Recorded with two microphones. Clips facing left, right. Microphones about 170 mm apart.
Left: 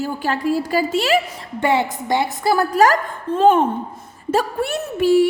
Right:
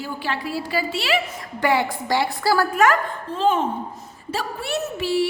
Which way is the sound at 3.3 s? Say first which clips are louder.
Left 7 dB; 55° left (ahead or behind).